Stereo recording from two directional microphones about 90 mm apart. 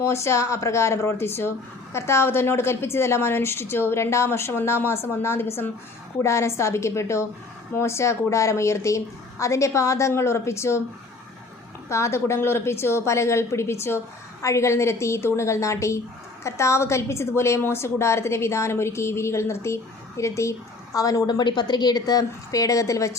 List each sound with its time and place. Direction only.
0.0 s a woman's voice: 30° left (ahead or behind)
11.9 s a woman's voice: 30° left (ahead or behind)